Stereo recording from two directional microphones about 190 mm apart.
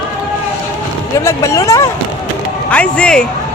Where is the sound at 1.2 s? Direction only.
15° left (ahead or behind).